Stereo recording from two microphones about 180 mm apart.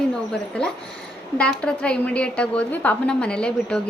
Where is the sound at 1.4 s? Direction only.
5° left (ahead or behind).